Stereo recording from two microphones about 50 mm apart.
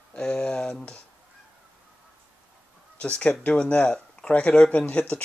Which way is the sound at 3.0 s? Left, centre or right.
Left.